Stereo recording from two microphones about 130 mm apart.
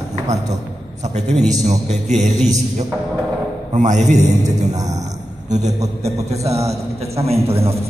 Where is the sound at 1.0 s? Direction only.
60° right (ahead or behind).